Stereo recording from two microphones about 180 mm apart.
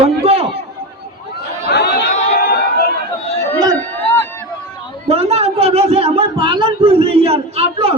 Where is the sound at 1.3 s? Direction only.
65° left (ahead or behind).